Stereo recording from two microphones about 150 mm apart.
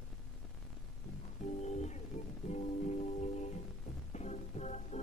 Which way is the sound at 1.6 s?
50° left (ahead or behind).